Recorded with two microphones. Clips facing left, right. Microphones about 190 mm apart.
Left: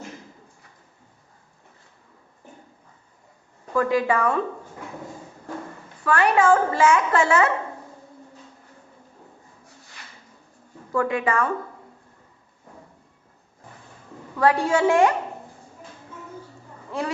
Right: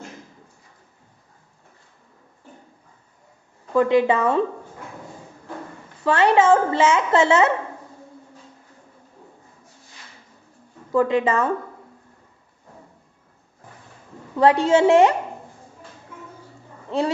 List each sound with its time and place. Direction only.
3.8 s a woman's voice: 25° right (ahead or behind)
6.1 s a woman's voice: 25° right (ahead or behind)
10.9 s a woman's voice: 25° right (ahead or behind)
14.3 s a woman's voice: 25° right (ahead or behind)
16.9 s a woman's voice: 25° right (ahead or behind)